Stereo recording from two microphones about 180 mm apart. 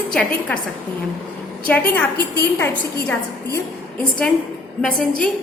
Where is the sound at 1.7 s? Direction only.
10° left (ahead or behind).